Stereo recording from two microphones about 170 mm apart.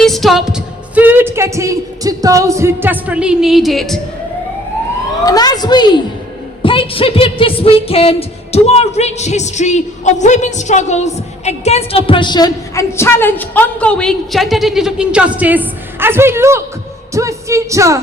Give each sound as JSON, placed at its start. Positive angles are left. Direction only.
{"t": 0.0, "sound": "a woman's voice", "side_deg": 0}
{"t": 5.2, "sound": "a woman's voice", "side_deg": 20}